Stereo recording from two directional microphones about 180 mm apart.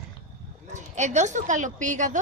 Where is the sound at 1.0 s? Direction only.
40° right (ahead or behind).